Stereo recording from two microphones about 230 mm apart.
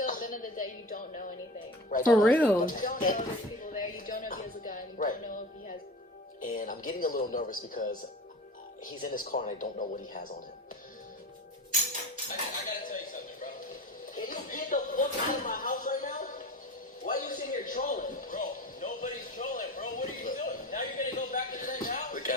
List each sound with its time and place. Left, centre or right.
0.0 s music: left
1.9 s a woman's voice: left
2.2 s a woman's voice: centre
2.6 s speech: left
3.7 s music: left
6.4 s speech: left
9.0 s speech: left
12.3 s dishes: left
14.2 s a sound: left
17.1 s music: left